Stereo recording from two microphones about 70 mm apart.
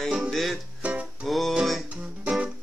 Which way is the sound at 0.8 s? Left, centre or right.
Centre.